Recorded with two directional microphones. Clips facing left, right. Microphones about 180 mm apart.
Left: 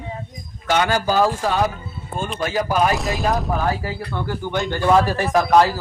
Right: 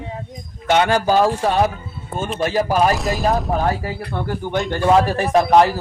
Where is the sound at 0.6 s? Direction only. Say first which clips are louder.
Right 3 dB; 25° right (ahead or behind).